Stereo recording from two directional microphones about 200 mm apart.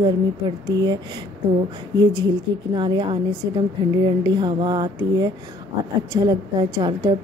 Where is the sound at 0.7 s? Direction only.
20° right (ahead or behind).